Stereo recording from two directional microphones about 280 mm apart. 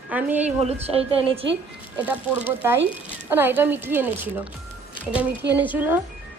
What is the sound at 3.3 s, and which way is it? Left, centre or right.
A woman's voice, centre.